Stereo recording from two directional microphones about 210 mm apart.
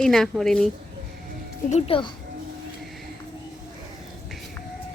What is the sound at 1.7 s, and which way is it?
Speech, 25° left (ahead or behind).